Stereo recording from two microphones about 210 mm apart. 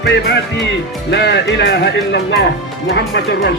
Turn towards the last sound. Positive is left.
turn(degrees=55)  # may be behind; listen again after turning